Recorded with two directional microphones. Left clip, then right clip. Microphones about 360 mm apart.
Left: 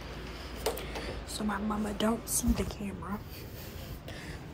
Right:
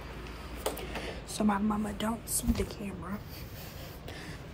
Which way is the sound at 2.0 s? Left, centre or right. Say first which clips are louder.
Left 6 dB; centre.